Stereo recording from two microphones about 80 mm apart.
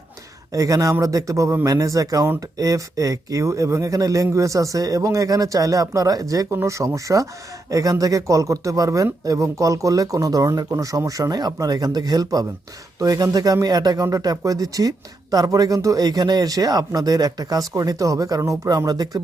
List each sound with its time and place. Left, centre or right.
0.5 s speech: right
6.5 s speech: right